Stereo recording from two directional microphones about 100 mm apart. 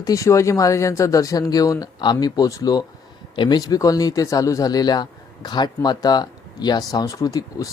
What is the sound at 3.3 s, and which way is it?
Speech, 50° left (ahead or behind).